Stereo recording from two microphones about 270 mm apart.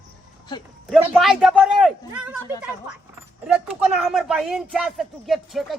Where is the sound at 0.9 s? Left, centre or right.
Centre.